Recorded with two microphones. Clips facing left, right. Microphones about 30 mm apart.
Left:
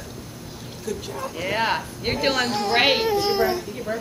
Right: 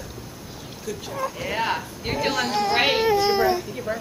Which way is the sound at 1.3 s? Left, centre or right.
Centre.